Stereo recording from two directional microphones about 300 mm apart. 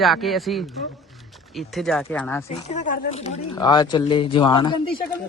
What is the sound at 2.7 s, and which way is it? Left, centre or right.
Speech, left.